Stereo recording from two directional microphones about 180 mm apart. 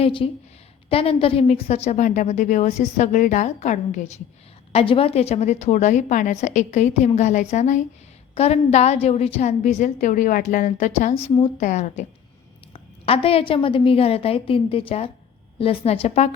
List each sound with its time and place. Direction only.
0.0 s a woman's voice: 30° left (ahead or behind)
4.7 s a woman's voice: 30° left (ahead or behind)